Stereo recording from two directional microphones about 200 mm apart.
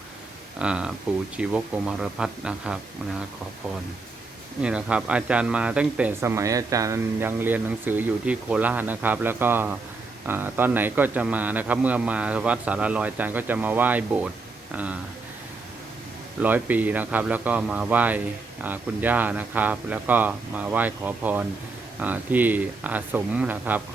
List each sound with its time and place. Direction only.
0.6 s speech: 5° right (ahead or behind)
4.6 s a man's voice: 5° right (ahead or behind)
16.4 s a man's voice: 10° right (ahead or behind)